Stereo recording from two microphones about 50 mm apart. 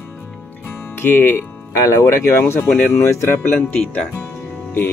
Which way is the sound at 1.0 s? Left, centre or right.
Left.